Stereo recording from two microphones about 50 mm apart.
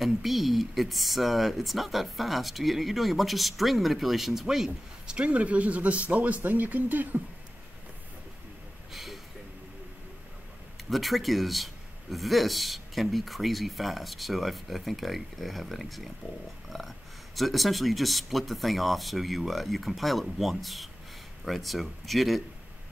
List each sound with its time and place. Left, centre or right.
0.0 s a man's voice: centre
5.1 s speech: right
8.9 s a sound: centre
10.9 s a man's voice: centre
16.6 s pig: centre
17.4 s a man's voice: centre